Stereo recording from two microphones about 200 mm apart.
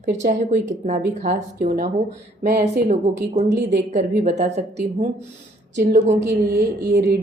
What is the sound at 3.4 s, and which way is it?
Speech, 60° right (ahead or behind).